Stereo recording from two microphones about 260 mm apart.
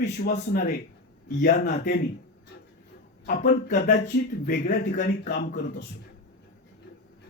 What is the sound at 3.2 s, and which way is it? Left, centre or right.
Speech, left.